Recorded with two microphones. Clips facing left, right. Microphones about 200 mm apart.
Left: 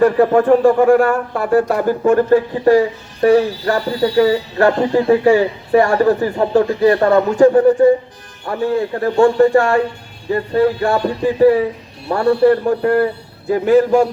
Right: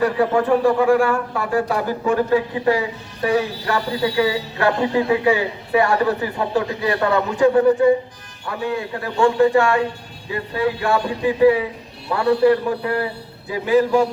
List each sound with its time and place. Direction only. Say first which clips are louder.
0.0 s speech: left 6 dB; 50° left (ahead or behind)